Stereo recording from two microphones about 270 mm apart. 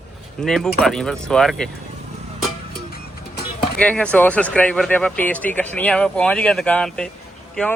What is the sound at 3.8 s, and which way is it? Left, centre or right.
Speech, centre.